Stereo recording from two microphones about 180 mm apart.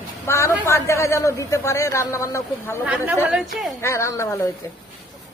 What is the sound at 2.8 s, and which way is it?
Speech, 5° right (ahead or behind).